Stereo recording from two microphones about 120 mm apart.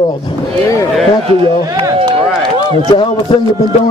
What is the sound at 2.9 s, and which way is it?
Speech, 40° left (ahead or behind).